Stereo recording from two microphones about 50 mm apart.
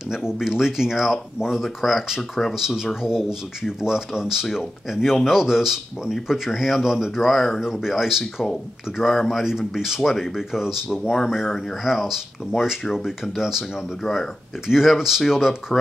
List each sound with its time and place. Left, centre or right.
0.1 s speech: centre
14.0 s speech: centre
14.7 s speech: centre